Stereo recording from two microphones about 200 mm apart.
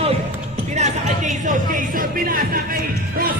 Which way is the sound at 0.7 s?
35° right (ahead or behind).